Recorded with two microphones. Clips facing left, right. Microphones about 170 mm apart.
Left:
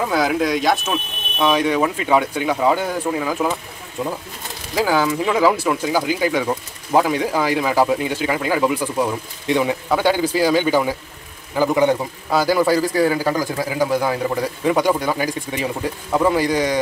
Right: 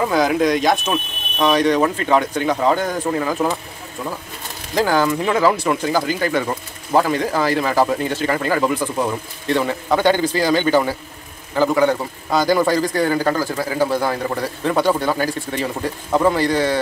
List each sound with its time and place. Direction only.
0.0 s speech: centre (ahead or behind)
4.0 s speech: 20° left (ahead or behind)